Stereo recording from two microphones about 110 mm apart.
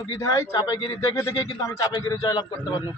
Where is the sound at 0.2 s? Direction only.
30° left (ahead or behind).